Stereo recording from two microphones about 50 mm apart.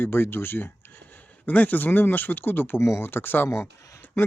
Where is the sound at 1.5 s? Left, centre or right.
Left.